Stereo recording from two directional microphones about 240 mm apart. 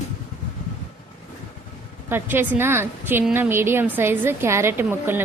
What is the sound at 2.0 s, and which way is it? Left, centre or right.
A woman's voice, centre.